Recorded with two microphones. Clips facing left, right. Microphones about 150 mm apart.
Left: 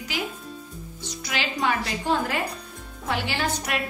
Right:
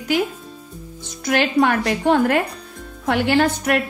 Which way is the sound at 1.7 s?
65° right (ahead or behind).